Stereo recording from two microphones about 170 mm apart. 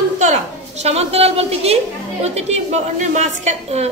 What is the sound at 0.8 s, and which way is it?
A woman's voice, 35° right (ahead or behind).